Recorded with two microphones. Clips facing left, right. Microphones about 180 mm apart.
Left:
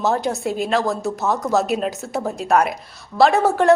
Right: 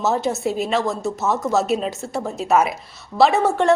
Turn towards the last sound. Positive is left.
turn(degrees=0)  # may be behind; listen again after turning